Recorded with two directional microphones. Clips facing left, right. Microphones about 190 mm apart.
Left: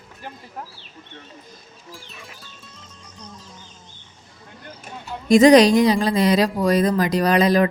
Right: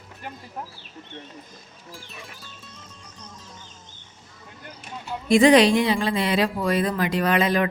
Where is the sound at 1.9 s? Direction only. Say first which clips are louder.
Even; centre (ahead or behind).